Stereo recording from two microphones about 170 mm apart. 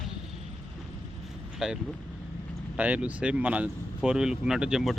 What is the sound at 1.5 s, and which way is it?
Speech, 5° right (ahead or behind).